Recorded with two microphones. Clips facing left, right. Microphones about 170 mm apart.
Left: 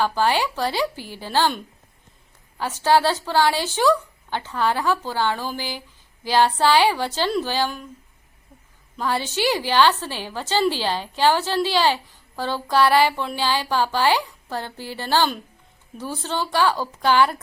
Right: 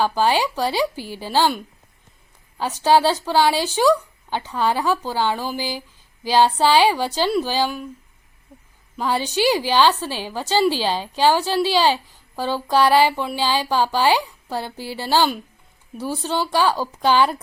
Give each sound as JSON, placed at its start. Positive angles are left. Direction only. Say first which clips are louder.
{"t": 0.0, "sound": "a woman's voice", "louder": "right 2 dB", "side_deg": -15}
{"t": 9.0, "sound": "a woman's voice", "louder": "right 3 dB", "side_deg": -15}